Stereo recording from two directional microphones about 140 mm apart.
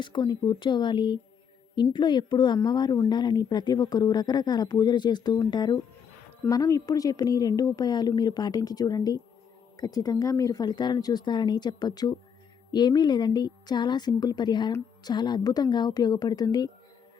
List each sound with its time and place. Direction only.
0.0 s a woman's voice: 35° left (ahead or behind)